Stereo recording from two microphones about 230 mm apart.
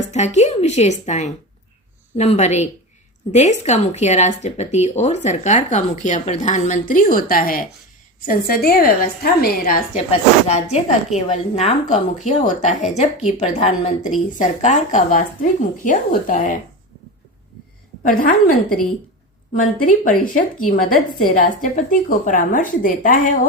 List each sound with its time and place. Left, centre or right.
0.1 s speech: left
10.1 s speech: left
18.1 s speech: left